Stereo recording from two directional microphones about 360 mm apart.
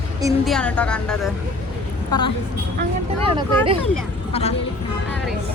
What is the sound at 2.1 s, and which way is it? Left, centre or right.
Speech, centre.